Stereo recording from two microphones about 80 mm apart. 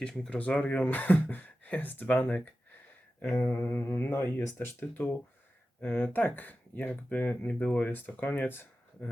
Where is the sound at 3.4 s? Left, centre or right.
Left.